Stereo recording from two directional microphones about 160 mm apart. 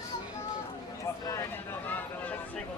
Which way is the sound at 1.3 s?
15° left (ahead or behind).